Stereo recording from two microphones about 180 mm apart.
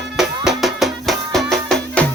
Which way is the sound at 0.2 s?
Centre (ahead or behind).